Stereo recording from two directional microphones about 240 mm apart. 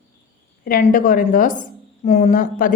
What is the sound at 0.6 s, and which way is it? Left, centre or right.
A woman's voice, left.